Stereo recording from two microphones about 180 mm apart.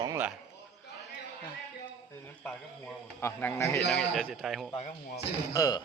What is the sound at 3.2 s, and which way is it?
Speech, 15° left (ahead or behind).